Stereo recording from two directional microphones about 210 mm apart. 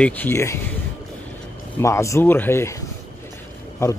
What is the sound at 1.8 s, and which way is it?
Speech, 15° left (ahead or behind).